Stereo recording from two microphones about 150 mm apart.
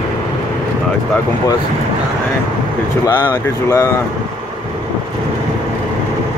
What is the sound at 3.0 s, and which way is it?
Speech, 30° left (ahead or behind).